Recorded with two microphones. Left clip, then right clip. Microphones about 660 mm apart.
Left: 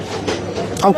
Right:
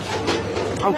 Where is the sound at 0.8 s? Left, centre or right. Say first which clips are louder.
Left 8 dB; left.